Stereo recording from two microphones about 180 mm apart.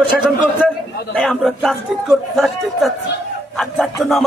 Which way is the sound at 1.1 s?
5° left (ahead or behind).